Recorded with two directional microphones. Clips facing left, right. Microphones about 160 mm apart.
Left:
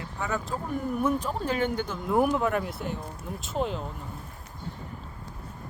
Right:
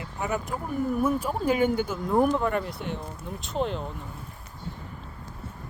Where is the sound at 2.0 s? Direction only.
5° left (ahead or behind).